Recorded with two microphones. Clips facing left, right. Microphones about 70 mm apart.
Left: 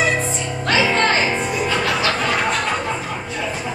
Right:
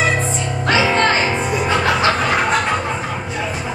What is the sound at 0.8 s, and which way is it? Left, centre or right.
Music, centre.